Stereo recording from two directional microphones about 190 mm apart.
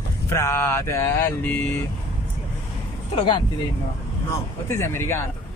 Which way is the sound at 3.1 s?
25° left (ahead or behind).